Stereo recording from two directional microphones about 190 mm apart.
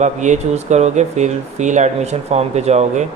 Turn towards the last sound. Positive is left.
turn(degrees=-35)  # may be behind; listen again after turning